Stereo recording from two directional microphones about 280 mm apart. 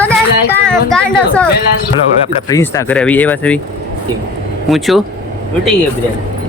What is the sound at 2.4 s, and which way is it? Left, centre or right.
Speech, centre.